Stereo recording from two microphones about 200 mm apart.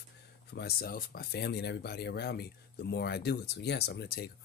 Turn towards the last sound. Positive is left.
turn(degrees=55)  # may be behind; listen again after turning